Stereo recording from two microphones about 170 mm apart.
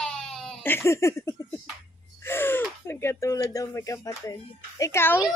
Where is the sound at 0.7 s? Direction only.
15° left (ahead or behind).